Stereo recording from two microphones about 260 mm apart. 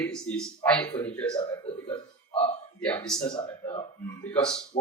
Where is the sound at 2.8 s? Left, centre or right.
Centre.